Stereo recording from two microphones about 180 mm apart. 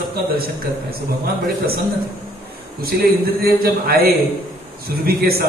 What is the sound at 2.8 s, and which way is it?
A man's voice, 55° right (ahead or behind).